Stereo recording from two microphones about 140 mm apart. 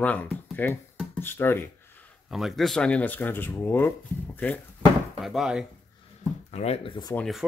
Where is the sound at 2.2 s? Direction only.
Centre (ahead or behind).